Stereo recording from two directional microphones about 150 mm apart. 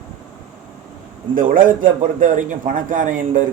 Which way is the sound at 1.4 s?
65° right (ahead or behind).